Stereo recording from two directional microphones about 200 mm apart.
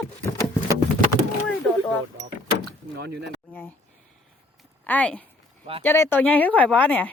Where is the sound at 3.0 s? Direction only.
60° right (ahead or behind).